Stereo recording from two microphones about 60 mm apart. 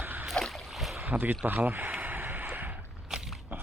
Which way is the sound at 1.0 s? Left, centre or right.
Right.